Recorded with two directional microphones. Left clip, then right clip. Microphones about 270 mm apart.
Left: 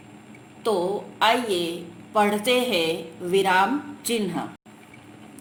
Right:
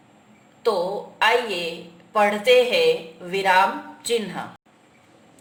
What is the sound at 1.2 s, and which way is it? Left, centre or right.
A man's voice, left.